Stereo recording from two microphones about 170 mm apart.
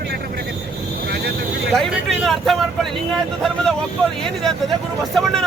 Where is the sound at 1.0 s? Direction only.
65° right (ahead or behind).